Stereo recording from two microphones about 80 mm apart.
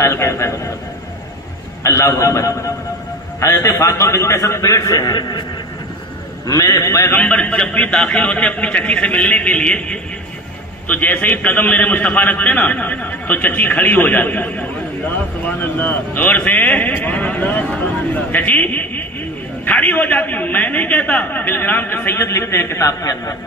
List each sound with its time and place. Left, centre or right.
0.0 s a man's voice: left
1.8 s a man's voice: left
6.4 s a man's voice: left
7.1 s a man's voice: centre; by 23.3 s left